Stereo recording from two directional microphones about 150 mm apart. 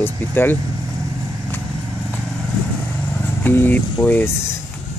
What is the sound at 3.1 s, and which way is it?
Speech, 15° left (ahead or behind).